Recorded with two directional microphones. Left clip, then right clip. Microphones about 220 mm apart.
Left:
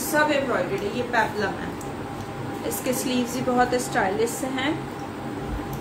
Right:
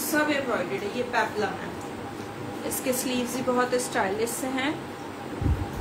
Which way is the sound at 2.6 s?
10° right (ahead or behind).